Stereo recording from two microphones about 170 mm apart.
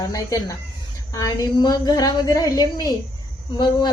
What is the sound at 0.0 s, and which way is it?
A woman's voice, 20° left (ahead or behind).